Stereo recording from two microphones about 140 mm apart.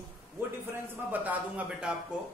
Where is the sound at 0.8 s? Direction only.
10° right (ahead or behind).